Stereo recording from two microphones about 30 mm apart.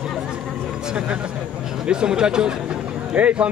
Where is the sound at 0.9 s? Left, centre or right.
Right.